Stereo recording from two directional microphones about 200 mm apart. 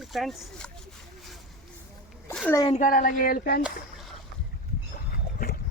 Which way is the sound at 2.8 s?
45° left (ahead or behind).